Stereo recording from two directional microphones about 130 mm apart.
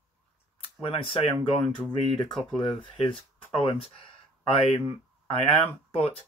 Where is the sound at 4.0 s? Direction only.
45° left (ahead or behind).